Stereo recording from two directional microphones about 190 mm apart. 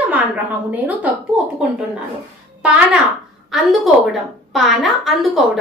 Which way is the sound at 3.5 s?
Centre (ahead or behind).